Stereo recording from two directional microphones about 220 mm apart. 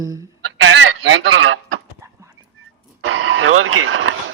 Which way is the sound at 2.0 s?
15° right (ahead or behind).